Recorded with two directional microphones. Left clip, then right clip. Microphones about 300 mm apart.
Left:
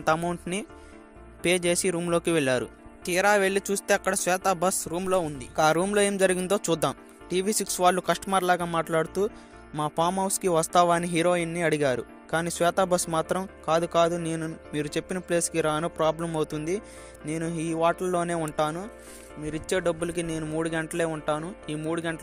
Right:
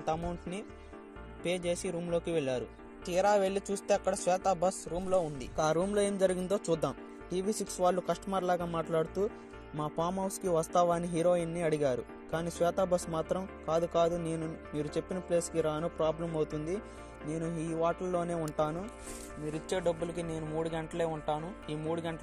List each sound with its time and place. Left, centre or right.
0.0 s speech: left
19.7 s speech: left